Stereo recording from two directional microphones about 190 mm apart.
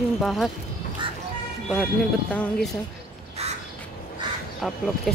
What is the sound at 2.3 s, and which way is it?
Speech, 10° left (ahead or behind).